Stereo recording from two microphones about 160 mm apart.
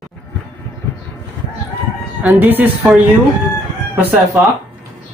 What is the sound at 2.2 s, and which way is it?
Speech, 10° right (ahead or behind).